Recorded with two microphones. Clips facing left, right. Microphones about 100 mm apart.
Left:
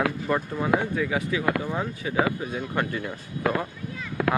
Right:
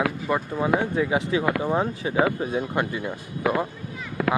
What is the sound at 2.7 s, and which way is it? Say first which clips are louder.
Speech: right 2 dB; 15° right (ahead or behind).